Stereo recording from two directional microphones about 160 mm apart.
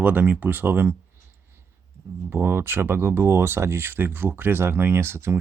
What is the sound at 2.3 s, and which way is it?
Speech, 15° right (ahead or behind).